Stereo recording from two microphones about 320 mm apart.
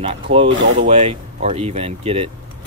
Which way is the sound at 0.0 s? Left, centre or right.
Centre.